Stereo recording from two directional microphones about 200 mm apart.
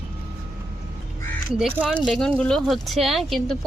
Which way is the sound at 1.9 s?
5° left (ahead or behind).